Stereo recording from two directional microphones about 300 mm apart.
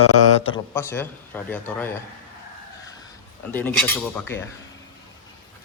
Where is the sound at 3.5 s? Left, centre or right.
Centre.